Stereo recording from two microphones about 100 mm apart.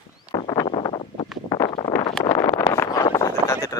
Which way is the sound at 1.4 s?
45° left (ahead or behind).